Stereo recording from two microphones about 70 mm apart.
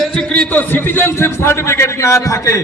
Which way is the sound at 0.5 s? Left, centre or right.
Left.